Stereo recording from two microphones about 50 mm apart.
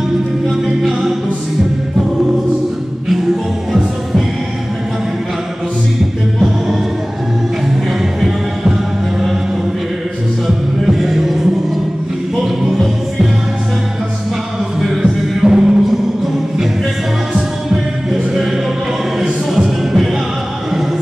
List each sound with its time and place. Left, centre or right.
8.0 s music: centre
10.4 s music: centre
12.6 s music: centre
14.8 s music: centre
18.1 s music: centre
19.8 s music: centre